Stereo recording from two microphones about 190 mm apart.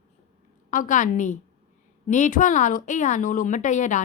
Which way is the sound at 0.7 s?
45° left (ahead or behind).